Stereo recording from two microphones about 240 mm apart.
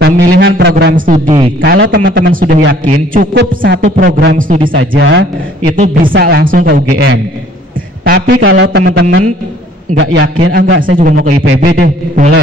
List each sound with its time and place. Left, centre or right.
0.0 s a man's voice: right
1.2 s speech: right
1.6 s a man's voice: right
9.9 s a man's voice: right